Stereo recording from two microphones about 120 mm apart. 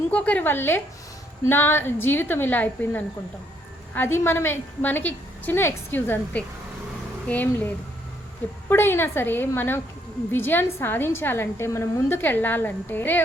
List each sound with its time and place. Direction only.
0.1 s a woman's voice: 15° left (ahead or behind)
8.7 s a woman's voice: 20° left (ahead or behind)